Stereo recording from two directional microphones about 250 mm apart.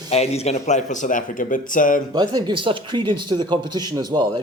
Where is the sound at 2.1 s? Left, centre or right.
Centre.